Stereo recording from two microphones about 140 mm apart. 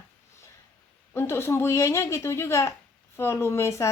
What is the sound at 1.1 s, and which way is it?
Speech, 15° left (ahead or behind).